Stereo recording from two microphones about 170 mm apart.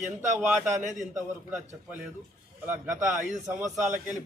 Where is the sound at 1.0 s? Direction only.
45° right (ahead or behind).